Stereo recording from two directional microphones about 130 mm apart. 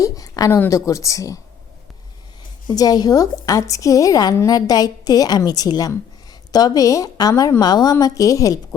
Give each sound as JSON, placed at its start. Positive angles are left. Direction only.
{"t": 0.0, "sound": "a sound", "side_deg": 25}
{"t": 0.6, "sound": "a woman's voice", "side_deg": 25}
{"t": 2.6, "sound": "a woman's voice", "side_deg": 30}